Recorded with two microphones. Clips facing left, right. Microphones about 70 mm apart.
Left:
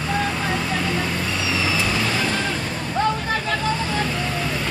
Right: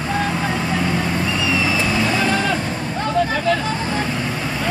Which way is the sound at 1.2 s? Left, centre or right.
Right.